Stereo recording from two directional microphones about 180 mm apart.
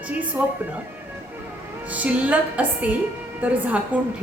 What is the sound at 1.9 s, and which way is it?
A woman's voice, 5° right (ahead or behind).